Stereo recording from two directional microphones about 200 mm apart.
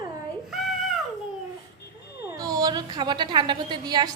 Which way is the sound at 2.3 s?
20° right (ahead or behind).